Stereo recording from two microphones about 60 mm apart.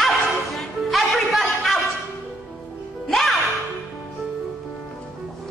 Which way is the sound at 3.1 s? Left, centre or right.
Centre.